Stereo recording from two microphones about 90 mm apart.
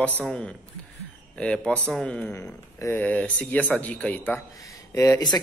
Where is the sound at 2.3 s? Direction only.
30° left (ahead or behind).